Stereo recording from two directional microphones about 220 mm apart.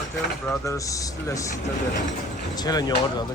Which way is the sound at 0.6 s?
15° left (ahead or behind).